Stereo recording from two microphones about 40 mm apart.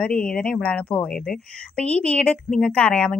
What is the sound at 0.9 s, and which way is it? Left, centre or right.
Speech, left.